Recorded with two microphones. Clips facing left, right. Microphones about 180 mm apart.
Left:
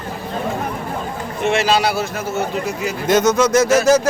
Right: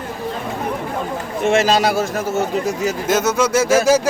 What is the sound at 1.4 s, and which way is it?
Speech, 45° right (ahead or behind).